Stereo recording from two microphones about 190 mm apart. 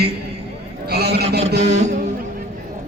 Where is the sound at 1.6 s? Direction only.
35° right (ahead or behind).